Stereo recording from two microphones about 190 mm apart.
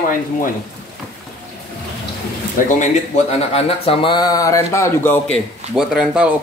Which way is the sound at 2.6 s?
40° left (ahead or behind).